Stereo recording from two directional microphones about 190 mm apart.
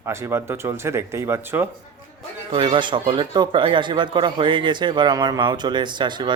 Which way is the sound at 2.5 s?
25° right (ahead or behind).